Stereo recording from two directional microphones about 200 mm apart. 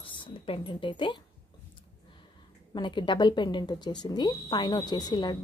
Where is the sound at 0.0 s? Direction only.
25° left (ahead or behind).